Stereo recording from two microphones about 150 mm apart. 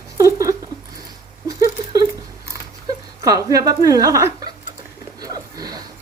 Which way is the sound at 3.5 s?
25° right (ahead or behind).